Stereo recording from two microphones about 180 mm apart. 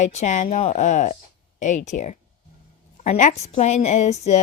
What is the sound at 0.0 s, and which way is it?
A woman's voice, 40° left (ahead or behind).